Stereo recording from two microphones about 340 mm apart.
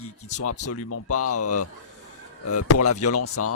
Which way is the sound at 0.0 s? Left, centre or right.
Left.